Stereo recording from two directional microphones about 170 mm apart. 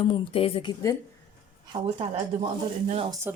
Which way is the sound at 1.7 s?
30° right (ahead or behind).